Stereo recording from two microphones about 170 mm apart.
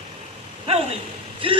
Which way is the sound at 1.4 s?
30° right (ahead or behind).